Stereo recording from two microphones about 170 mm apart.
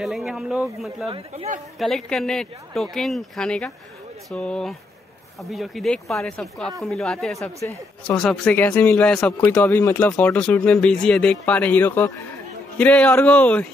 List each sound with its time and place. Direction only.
0.0 s speech: centre (ahead or behind)
1.0 s speech: 35° right (ahead or behind)
1.8 s speech: 5° left (ahead or behind)
7.6 s speech: 15° left (ahead or behind)